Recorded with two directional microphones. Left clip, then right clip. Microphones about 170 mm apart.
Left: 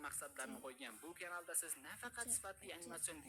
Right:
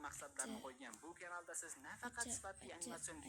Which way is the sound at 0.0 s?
25° left (ahead or behind).